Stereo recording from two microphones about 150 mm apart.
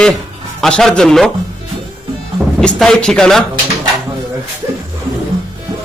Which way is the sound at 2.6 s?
5° left (ahead or behind).